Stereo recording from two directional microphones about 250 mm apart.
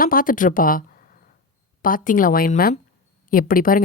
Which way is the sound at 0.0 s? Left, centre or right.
Left.